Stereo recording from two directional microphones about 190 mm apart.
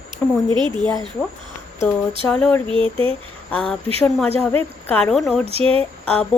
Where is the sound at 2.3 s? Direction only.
5° left (ahead or behind).